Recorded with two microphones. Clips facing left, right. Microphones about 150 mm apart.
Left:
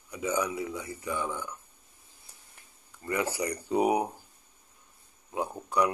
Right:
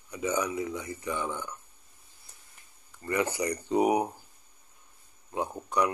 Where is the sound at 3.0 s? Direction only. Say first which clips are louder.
Right 1 dB; 10° left (ahead or behind).